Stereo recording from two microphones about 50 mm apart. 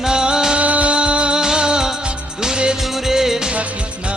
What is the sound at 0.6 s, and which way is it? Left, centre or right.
Music of bollywood, right.